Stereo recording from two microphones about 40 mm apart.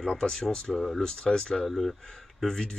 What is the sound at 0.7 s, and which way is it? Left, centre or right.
Speech, centre.